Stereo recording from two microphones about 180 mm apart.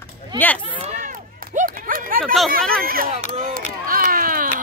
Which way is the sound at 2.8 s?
55° right (ahead or behind).